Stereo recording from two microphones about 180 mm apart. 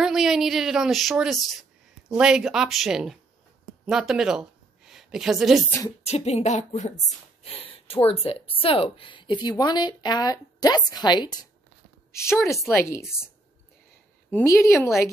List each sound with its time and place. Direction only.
0.0 s a woman's voice: centre (ahead or behind)
6.0 s a woman's voice: 35° left (ahead or behind); by 13.0 s 15° left (ahead or behind)
14.3 s a woman's voice: 15° left (ahead or behind)